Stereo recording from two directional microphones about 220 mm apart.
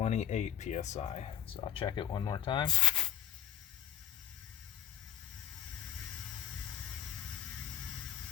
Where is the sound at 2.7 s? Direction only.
Centre (ahead or behind).